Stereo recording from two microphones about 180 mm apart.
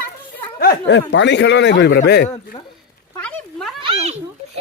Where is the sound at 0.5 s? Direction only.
65° left (ahead or behind).